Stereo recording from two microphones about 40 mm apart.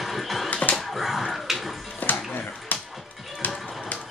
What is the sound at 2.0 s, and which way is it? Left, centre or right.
Music, left.